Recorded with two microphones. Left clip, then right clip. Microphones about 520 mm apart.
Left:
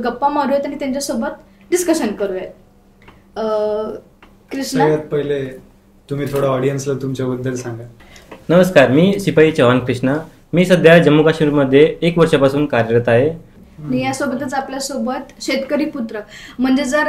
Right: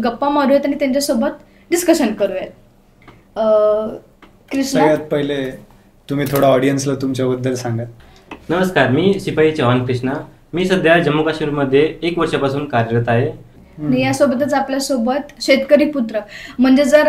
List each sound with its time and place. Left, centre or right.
0.0 s a woman's voice: centre
6.0 s speech: right
8.5 s speech: left
13.8 s speech: centre